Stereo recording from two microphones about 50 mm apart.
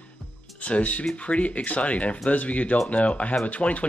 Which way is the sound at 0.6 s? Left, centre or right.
Left.